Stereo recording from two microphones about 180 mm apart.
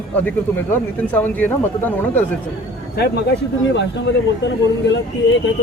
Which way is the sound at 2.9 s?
65° left (ahead or behind).